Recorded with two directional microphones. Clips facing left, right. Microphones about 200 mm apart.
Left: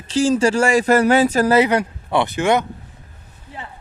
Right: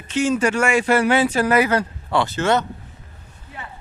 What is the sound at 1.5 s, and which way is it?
Speech, 20° left (ahead or behind).